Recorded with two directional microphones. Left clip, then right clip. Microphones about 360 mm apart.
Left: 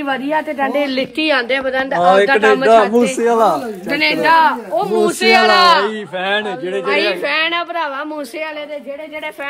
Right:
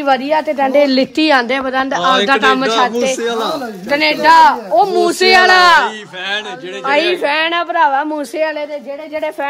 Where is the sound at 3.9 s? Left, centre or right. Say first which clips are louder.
Right 3 dB; right.